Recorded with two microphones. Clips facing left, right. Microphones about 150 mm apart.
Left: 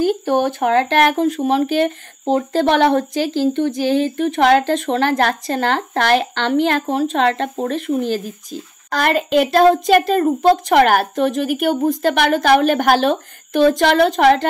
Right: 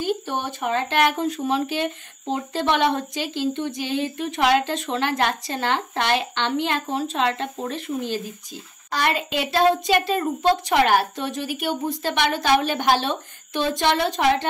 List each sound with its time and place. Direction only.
0.0 s speech: 45° left (ahead or behind)
0.6 s speech: 70° left (ahead or behind)
1.2 s a woman's voice: 45° left (ahead or behind)
7.2 s speech: 60° left (ahead or behind)
8.0 s a woman's voice: 45° left (ahead or behind)